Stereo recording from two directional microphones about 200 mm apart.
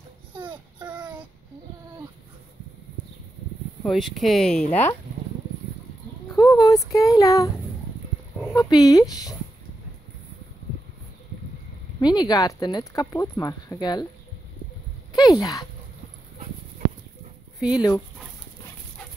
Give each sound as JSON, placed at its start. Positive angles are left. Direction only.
{"t": 0.4, "sound": "child singing", "side_deg": -25}
{"t": 3.8, "sound": "speech", "side_deg": 0}
{"t": 6.3, "sound": "speech", "side_deg": 15}
{"t": 8.5, "sound": "speech", "side_deg": 20}
{"t": 12.0, "sound": "speech", "side_deg": 20}
{"t": 15.1, "sound": "speech", "side_deg": 20}
{"t": 17.6, "sound": "speech", "side_deg": -5}